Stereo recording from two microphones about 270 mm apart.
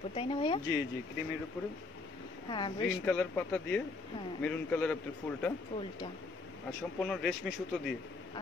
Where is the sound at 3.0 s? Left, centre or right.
Centre.